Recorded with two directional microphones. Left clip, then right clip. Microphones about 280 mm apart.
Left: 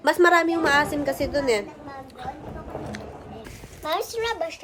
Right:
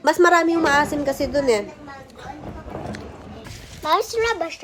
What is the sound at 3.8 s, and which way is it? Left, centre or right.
Speech, right.